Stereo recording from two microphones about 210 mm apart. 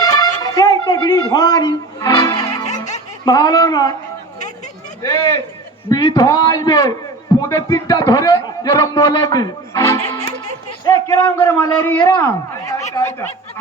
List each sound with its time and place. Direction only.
0.0 s music: 20° left (ahead or behind)
3.2 s a man's voice: 20° left (ahead or behind)
5.0 s a man's voice: 20° left (ahead or behind)